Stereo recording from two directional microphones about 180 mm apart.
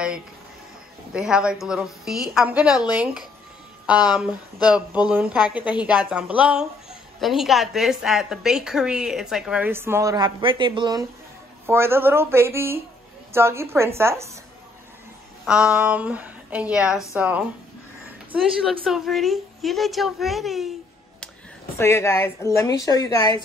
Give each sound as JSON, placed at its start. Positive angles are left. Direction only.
{"t": 1.1, "sound": "a woman's voice", "side_deg": -5}
{"t": 3.8, "sound": "a woman's voice", "side_deg": -5}
{"t": 11.6, "sound": "speech", "side_deg": -15}
{"t": 15.4, "sound": "a woman's voice", "side_deg": -5}
{"t": 21.7, "sound": "a woman's voice", "side_deg": 15}